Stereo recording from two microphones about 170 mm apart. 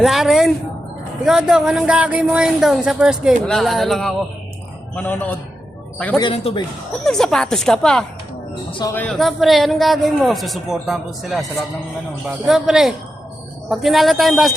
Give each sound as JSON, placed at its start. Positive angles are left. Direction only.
{"t": 0.0, "sound": "a man's voice", "side_deg": 0}
{"t": 6.1, "sound": "speech", "side_deg": 30}
{"t": 7.0, "sound": "a man's voice", "side_deg": 0}
{"t": 8.8, "sound": "a man's voice", "side_deg": 15}
{"t": 9.1, "sound": "a man's voice", "side_deg": 0}
{"t": 12.5, "sound": "a man's voice", "side_deg": 0}